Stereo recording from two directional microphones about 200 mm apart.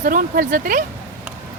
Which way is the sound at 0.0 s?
45° right (ahead or behind).